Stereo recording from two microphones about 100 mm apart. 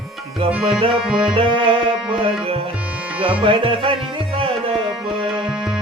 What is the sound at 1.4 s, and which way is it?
Music, 55° right (ahead or behind).